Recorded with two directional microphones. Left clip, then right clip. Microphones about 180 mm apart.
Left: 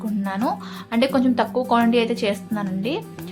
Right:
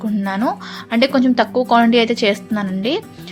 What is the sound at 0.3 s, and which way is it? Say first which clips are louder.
A woman's voice: right 4 dB; 25° right (ahead or behind).